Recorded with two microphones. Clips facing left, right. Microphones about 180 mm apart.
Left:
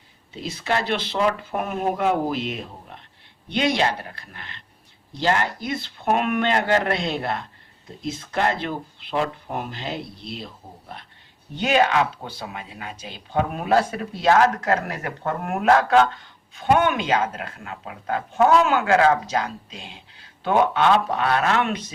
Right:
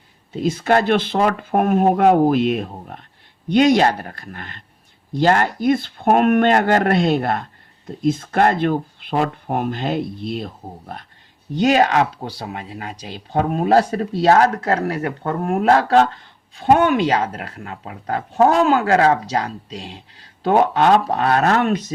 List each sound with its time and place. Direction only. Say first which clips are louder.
0.4 s speech: right 8 dB; 50° right (ahead or behind)